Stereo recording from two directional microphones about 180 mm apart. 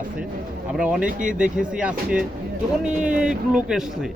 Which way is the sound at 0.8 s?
5° right (ahead or behind).